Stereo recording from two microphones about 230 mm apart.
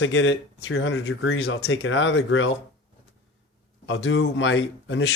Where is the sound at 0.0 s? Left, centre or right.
Left.